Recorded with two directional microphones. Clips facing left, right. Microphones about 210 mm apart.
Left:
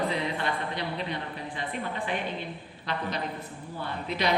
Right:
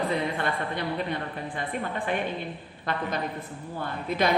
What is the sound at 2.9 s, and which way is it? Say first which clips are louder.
Speech: right 2 dB; 50° right (ahead or behind).